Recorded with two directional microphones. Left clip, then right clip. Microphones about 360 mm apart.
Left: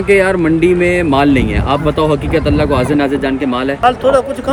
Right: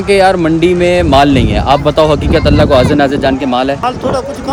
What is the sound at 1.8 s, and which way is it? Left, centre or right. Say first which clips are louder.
Speech: right 4 dB; right.